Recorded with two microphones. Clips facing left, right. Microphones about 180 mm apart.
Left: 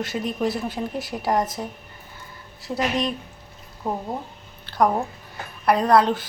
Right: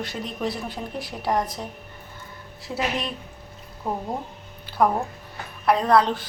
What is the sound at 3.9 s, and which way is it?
Speech, centre (ahead or behind).